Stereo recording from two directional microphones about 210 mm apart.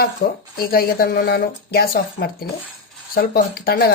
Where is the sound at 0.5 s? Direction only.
45° left (ahead or behind).